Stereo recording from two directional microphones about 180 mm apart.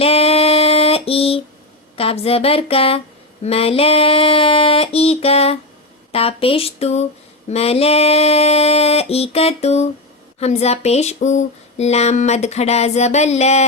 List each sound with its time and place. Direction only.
0.0 s music: 35° left (ahead or behind)
2.0 s speech: 35° left (ahead or behind)